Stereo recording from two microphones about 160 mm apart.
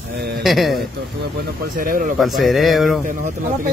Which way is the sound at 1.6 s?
60° right (ahead or behind).